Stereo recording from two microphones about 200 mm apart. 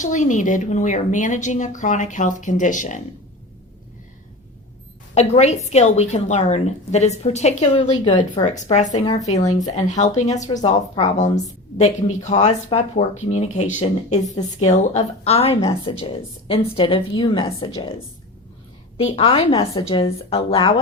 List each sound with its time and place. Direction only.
0.0 s a woman's voice: 40° left (ahead or behind)
5.1 s a woman's voice: 35° left (ahead or behind); by 17.8 s 20° left (ahead or behind)
18.9 s a woman's voice: 30° left (ahead or behind)